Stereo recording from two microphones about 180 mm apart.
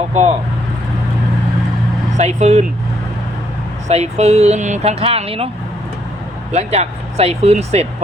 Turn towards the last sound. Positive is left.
turn(degrees=-35)  # may be behind; listen again after turning